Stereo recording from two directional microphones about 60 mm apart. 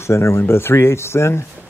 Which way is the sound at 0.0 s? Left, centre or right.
Left.